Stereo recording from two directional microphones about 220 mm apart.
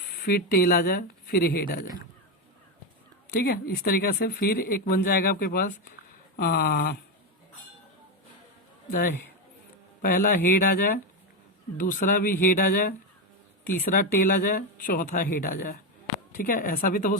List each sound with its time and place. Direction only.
0.3 s speech: 45° left (ahead or behind)
3.2 s speech: 45° left (ahead or behind)
8.9 s speech: 40° left (ahead or behind)
13.9 s speech: 40° left (ahead or behind)